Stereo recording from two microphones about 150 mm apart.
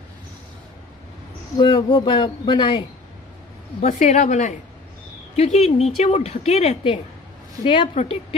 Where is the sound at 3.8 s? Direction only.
55° left (ahead or behind).